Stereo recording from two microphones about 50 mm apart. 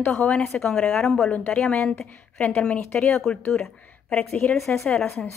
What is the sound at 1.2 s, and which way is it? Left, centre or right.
Speech, left.